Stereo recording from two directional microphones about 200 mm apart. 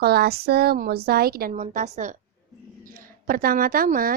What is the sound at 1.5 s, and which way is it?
A woman's voice, 40° right (ahead or behind).